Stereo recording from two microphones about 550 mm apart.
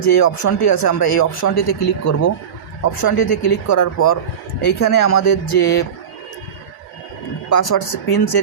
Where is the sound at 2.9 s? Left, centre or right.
Left.